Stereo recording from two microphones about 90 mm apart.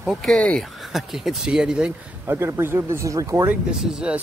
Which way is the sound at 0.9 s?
5° right (ahead or behind).